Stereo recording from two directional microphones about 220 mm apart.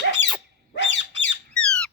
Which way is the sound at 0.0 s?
55° left (ahead or behind).